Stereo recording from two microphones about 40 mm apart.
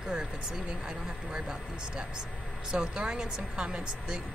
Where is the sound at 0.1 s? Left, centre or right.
Centre.